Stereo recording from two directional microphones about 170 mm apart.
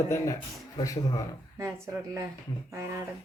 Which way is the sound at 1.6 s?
15° right (ahead or behind).